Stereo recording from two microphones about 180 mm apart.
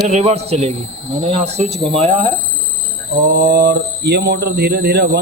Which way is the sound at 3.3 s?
60° right (ahead or behind).